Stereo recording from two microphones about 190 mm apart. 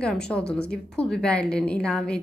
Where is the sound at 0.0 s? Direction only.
5° left (ahead or behind).